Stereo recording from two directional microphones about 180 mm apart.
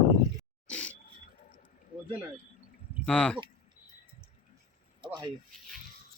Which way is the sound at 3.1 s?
5° left (ahead or behind).